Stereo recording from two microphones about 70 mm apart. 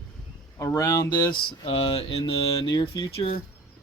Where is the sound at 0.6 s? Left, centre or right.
Left.